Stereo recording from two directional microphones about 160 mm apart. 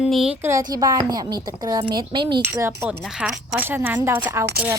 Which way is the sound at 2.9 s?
5° right (ahead or behind).